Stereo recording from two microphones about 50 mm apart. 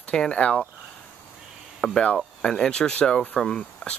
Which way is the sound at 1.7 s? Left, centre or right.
Centre.